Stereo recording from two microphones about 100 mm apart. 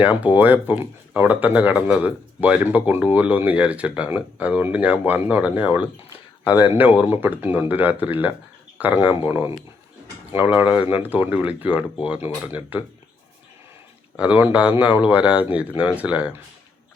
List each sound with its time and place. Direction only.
0.0 s speech: 15° right (ahead or behind)
14.2 s speech: 15° right (ahead or behind)